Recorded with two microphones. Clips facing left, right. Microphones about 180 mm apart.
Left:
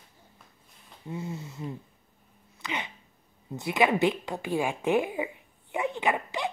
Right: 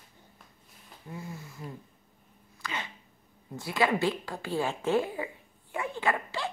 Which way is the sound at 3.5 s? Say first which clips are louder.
Left 3 dB; 20° left (ahead or behind).